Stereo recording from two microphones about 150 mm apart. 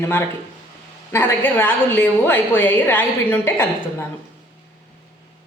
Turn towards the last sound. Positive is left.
turn(degrees=15)  # may be behind; listen again after turning